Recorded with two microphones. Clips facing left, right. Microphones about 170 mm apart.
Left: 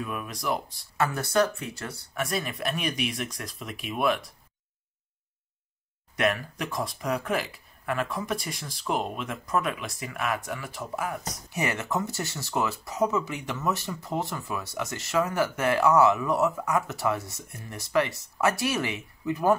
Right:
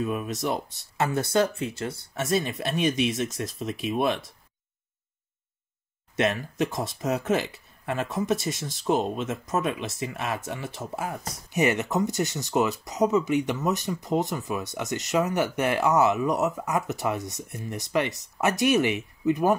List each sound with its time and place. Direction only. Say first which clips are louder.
0.0 s speech: right 5 dB; 25° right (ahead or behind)
6.1 s speech: right 2 dB; 25° right (ahead or behind)